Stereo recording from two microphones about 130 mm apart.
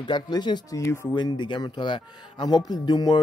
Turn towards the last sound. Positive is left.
turn(degrees=30)  # may be behind; listen again after turning